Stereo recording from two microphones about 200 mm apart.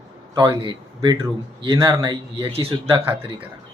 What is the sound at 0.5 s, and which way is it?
Speech, 25° right (ahead or behind).